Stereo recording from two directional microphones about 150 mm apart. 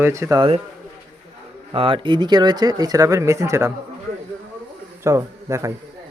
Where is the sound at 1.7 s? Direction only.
35° right (ahead or behind); by 3.7 s 20° right (ahead or behind).